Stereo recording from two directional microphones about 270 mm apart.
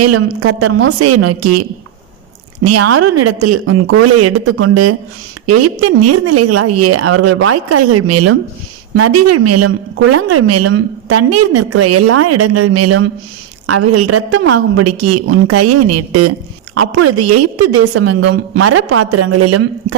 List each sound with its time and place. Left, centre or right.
0.0 s a woman's voice: right
0.9 s a woman's voice: right
2.6 s a woman's voice: right
18.2 s speech: right
18.6 s a woman's voice: right